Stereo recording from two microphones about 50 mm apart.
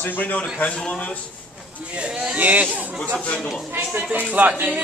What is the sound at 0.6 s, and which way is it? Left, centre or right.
Speech, left.